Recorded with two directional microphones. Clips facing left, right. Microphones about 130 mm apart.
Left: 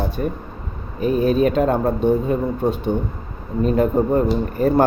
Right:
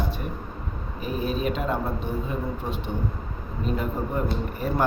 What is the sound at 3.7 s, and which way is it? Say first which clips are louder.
Speech: left 11 dB; 50° left (ahead or behind).